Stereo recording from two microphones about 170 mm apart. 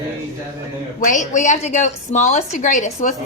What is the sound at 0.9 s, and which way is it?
A woman's voice, 50° left (ahead or behind).